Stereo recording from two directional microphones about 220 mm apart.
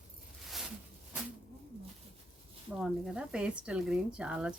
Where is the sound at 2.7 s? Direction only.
5° right (ahead or behind).